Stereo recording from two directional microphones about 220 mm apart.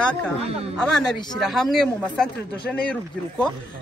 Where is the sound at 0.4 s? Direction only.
25° right (ahead or behind).